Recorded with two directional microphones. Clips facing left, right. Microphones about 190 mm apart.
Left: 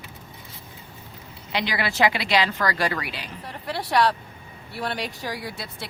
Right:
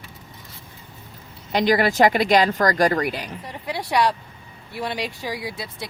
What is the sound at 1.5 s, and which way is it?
Speech, 45° right (ahead or behind).